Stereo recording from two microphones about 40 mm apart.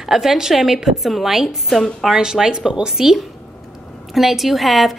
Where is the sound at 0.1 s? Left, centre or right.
Centre.